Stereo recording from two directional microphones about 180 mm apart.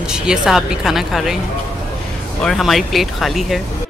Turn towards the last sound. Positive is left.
turn(degrees=0)  # may be behind; listen again after turning